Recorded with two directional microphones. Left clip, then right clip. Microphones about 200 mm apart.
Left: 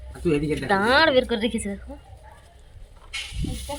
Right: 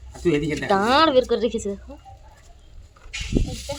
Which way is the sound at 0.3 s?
40° right (ahead or behind).